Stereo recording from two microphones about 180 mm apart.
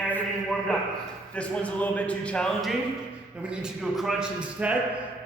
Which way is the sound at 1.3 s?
5° left (ahead or behind).